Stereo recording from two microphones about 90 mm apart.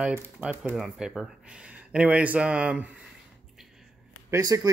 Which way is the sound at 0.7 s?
5° right (ahead or behind).